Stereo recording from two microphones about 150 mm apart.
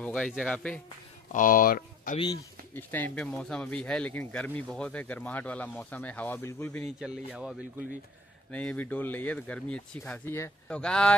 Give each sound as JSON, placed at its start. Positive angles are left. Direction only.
{"t": 0.0, "sound": "a sound", "side_deg": 5}
{"t": 0.3, "sound": "speech", "side_deg": 0}
{"t": 1.3, "sound": "speech", "side_deg": 65}
{"t": 2.7, "sound": "speech", "side_deg": 15}
{"t": 6.8, "sound": "speech", "side_deg": -5}
{"t": 8.5, "sound": "speech", "side_deg": 10}